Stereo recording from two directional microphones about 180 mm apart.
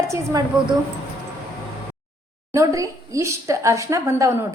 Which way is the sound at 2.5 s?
15° right (ahead or behind).